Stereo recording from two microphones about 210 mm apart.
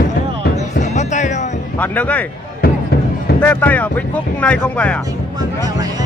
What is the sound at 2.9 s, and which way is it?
Music, 45° left (ahead or behind).